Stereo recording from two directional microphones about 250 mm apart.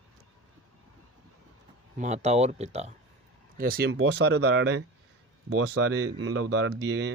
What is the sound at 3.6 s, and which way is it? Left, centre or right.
Speech, right.